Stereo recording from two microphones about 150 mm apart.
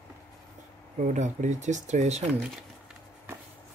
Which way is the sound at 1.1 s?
55° right (ahead or behind).